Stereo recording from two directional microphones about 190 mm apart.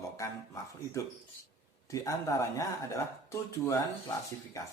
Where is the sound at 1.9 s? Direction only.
15° left (ahead or behind).